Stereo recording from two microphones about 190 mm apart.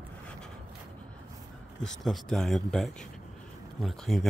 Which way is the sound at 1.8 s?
Centre (ahead or behind).